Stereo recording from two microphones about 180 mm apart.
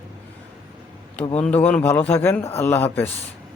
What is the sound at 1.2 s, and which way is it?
Speech, 35° left (ahead or behind).